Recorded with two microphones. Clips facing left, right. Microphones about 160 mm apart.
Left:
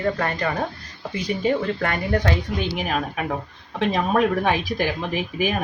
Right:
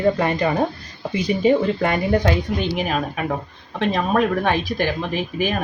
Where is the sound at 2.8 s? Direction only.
Centre (ahead or behind).